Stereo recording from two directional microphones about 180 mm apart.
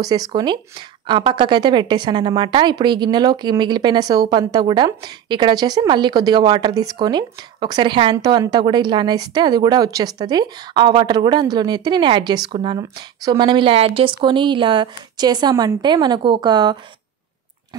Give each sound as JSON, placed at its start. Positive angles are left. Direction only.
{"t": 0.0, "sound": "a woman's voice", "side_deg": -20}